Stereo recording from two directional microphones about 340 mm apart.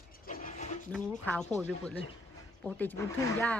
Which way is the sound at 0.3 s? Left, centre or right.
Left.